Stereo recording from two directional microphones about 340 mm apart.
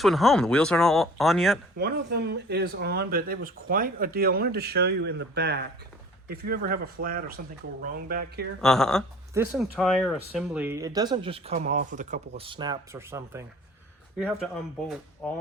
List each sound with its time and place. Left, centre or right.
0.0 s speech: centre
1.8 s speech: right
8.6 s speech: centre